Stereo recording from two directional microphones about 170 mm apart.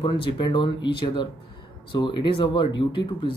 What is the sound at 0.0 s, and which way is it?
Speech, 30° left (ahead or behind).